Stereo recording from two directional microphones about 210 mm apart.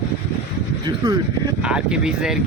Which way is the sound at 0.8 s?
20° right (ahead or behind).